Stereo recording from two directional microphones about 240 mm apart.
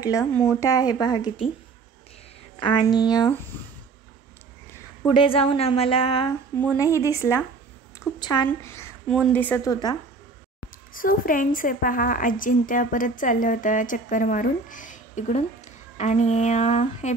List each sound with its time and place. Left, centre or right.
0.2 s a woman's voice: centre
2.6 s a woman's voice: centre
5.0 s a woman's voice: left
6.6 s a woman's voice: centre
10.9 s a woman's voice: left